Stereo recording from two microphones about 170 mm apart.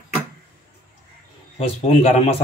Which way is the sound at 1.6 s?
35° left (ahead or behind).